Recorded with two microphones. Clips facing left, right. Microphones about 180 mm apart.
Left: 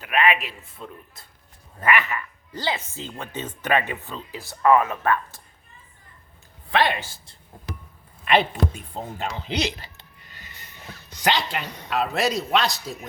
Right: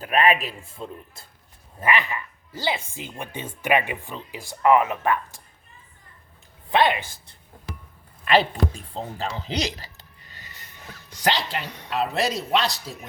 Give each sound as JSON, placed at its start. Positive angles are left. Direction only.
{"t": 0.0, "sound": "a man's voice", "side_deg": -35}
{"t": 1.8, "sound": "speech", "side_deg": -15}
{"t": 8.3, "sound": "speech", "side_deg": -30}
{"t": 9.4, "sound": "a sound", "side_deg": -40}
{"t": 11.2, "sound": "speech", "side_deg": -40}